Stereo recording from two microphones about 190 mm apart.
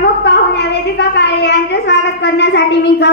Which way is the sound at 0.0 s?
60° left (ahead or behind).